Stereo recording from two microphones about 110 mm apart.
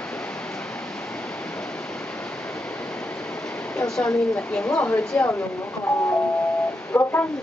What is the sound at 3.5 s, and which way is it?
Speech, 10° left (ahead or behind).